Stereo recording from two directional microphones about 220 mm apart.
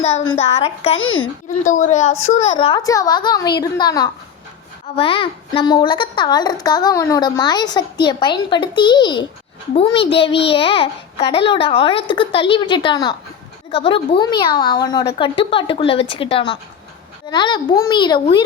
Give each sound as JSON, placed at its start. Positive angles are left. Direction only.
{"t": 0.5, "sound": "a child's voice", "side_deg": 30}